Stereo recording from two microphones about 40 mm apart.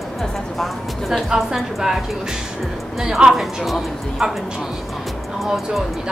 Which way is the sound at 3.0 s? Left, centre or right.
Centre.